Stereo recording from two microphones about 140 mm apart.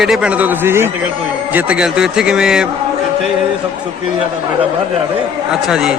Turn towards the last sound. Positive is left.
turn(degrees=-5)  # may be behind; listen again after turning